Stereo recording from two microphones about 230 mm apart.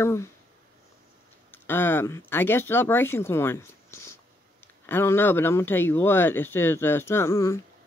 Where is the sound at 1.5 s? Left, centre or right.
Centre.